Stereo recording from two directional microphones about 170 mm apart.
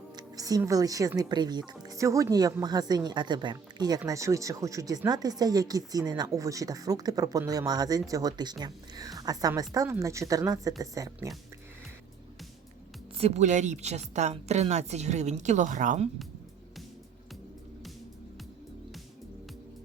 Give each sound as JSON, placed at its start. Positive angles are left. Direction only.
{"t": 0.1, "sound": "speech", "side_deg": -20}
{"t": 13.1, "sound": "a woman's voice", "side_deg": -40}